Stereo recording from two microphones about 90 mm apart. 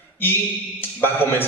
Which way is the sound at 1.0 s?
25° left (ahead or behind).